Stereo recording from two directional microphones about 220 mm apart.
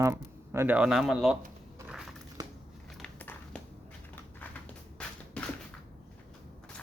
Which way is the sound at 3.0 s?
5° left (ahead or behind).